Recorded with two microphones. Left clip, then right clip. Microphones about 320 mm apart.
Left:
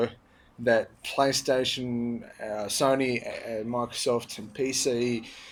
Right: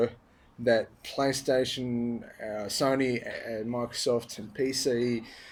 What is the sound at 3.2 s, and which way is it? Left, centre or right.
Speech, left.